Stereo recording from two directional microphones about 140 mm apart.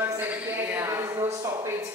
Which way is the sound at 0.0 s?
15° right (ahead or behind).